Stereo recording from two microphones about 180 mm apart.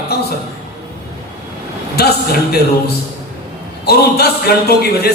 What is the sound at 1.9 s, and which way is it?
Speech, 60° left (ahead or behind).